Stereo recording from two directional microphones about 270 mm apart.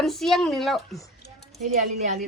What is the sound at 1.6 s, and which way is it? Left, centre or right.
Speech, right.